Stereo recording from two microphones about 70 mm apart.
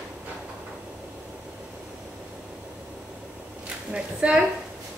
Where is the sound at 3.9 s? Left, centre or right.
Centre.